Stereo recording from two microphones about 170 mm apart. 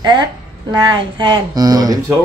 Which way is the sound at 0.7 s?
25° right (ahead or behind).